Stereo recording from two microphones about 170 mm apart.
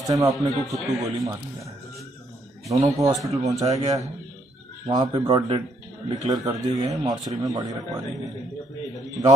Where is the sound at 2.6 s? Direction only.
20° right (ahead or behind).